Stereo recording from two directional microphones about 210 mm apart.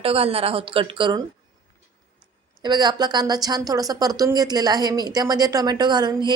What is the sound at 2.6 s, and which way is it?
A woman's voice, 20° right (ahead or behind).